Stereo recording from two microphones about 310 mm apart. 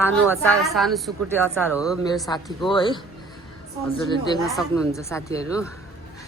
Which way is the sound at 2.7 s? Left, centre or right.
Centre.